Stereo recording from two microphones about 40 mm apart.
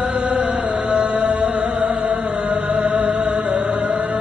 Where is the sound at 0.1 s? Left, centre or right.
Right.